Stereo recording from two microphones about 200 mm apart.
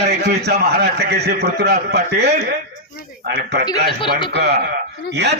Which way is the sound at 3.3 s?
55° right (ahead or behind).